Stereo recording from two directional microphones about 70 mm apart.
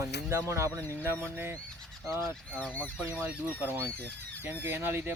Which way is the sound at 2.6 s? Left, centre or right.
Left.